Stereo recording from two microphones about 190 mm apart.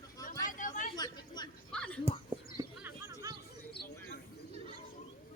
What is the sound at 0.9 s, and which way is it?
Chatter, 20° left (ahead or behind).